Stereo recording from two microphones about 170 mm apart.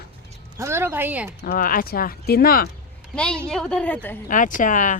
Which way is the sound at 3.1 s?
5° left (ahead or behind).